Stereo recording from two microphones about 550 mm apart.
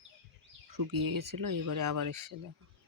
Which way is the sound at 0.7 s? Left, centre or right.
Right.